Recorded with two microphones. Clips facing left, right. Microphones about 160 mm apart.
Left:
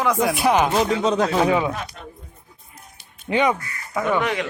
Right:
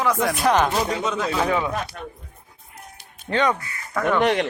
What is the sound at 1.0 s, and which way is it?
Speech, 35° left (ahead or behind).